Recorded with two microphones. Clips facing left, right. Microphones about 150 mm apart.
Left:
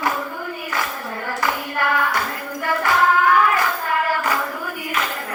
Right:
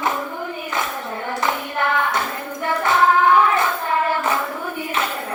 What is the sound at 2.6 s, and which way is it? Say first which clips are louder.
Hands: right 1 dB; 25° right (ahead or behind).